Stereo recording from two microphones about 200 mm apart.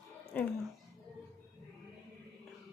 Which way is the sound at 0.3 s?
5° left (ahead or behind).